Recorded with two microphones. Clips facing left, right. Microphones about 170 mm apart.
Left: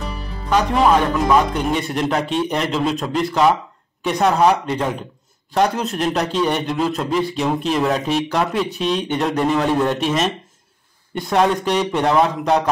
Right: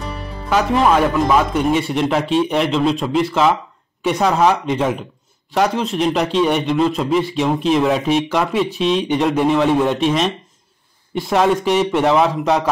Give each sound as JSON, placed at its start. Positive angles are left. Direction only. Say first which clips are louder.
{"t": 0.5, "sound": "a man's voice", "louder": "even", "side_deg": -5}